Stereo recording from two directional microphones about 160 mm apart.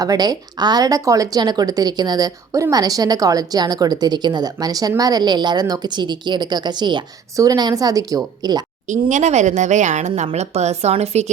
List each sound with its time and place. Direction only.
0.0 s speech: 25° right (ahead or behind)
8.9 s speech: 50° right (ahead or behind)